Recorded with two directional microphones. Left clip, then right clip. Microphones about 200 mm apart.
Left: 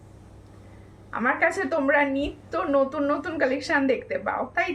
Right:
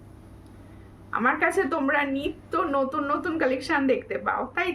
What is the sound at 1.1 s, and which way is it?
A woman's voice, 15° right (ahead or behind).